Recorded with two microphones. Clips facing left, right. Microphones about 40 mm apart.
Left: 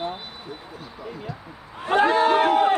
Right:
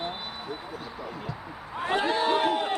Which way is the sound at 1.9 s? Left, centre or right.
Left.